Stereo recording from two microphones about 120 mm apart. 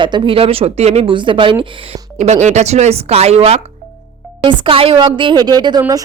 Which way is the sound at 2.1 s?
75° right (ahead or behind).